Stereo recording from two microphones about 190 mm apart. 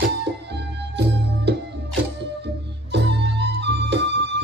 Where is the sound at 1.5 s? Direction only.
60° right (ahead or behind).